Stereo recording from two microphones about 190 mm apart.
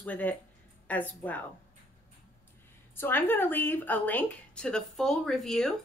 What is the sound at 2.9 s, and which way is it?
Speech, 10° left (ahead or behind).